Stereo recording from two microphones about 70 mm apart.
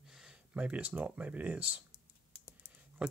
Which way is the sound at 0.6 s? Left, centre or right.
Right.